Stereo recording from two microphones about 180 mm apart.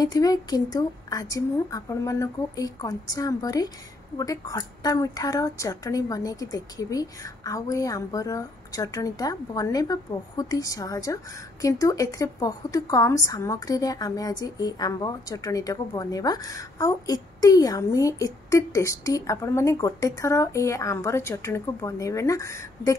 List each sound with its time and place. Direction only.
0.0 s a woman's voice: 20° left (ahead or behind)